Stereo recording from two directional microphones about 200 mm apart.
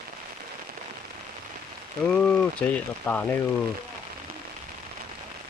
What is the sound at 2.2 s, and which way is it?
Speech, 5° left (ahead or behind).